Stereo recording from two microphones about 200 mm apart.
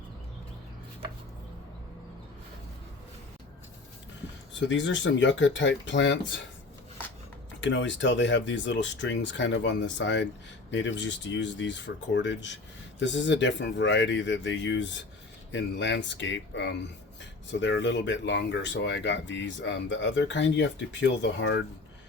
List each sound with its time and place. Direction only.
4.6 s speech: 65° left (ahead or behind)
7.6 s speech: 65° left (ahead or behind)